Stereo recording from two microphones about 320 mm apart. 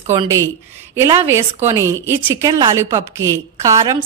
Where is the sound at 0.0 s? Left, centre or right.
Centre.